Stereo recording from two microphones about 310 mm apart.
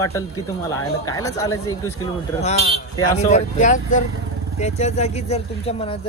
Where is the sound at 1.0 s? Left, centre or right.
Centre.